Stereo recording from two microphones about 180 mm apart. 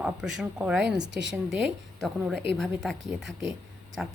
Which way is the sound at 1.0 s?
85° right.